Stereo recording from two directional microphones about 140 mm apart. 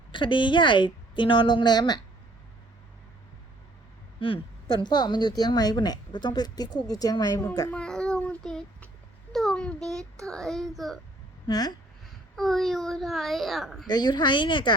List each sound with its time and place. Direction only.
0.1 s a woman's voice: 35° left (ahead or behind)
4.2 s speech: 40° left (ahead or behind)
7.7 s child singing: 5° left (ahead or behind)
9.3 s a sound: centre (ahead or behind)
10.2 s a child's voice: 5° left (ahead or behind)
11.4 s speech: 30° left (ahead or behind)
12.4 s a child's voice: centre (ahead or behind)
13.8 s a woman's voice: 30° left (ahead or behind)